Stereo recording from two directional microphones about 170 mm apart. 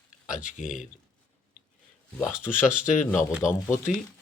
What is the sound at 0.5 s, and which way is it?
Speech, 50° left (ahead or behind).